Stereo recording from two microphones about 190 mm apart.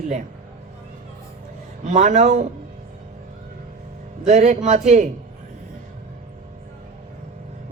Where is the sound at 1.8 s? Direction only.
35° right (ahead or behind).